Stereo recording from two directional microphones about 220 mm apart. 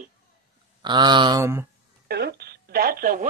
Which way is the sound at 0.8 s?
20° right (ahead or behind).